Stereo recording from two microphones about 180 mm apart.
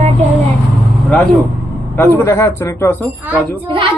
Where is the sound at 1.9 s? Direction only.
10° left (ahead or behind).